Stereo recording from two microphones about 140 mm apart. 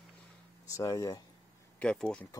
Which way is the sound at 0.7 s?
25° left (ahead or behind).